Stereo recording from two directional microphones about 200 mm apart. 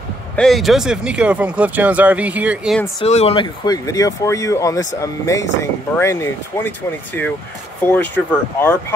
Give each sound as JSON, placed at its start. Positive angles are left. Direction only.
{"t": 0.4, "sound": "speech", "side_deg": 0}
{"t": 3.0, "sound": "speech", "side_deg": 30}
{"t": 7.8, "sound": "speech", "side_deg": 10}